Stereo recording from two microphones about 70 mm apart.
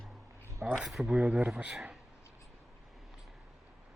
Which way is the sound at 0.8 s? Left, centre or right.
Centre.